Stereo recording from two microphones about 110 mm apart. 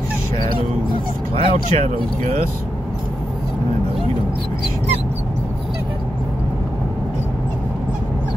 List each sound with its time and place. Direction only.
0.6 s speech: 55° right (ahead or behind)